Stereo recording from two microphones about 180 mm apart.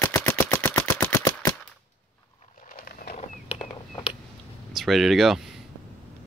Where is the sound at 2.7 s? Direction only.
55° left (ahead or behind).